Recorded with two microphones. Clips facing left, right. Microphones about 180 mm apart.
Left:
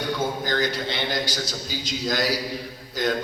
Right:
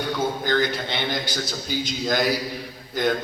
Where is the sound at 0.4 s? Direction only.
55° right (ahead or behind).